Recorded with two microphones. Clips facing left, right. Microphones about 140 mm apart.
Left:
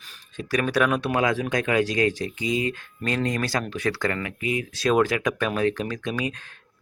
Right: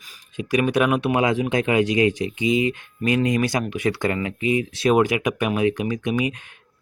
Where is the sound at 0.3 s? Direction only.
15° right (ahead or behind).